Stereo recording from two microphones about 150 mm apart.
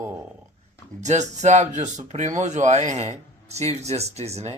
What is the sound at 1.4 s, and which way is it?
Speech, 50° right (ahead or behind).